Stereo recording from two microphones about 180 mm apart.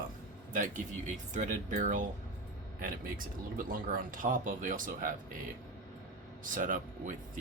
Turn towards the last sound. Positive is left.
turn(degrees=-50)  # may be behind; listen again after turning